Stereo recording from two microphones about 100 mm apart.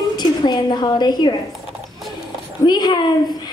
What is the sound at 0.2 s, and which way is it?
A woman's voice, 45° left (ahead or behind).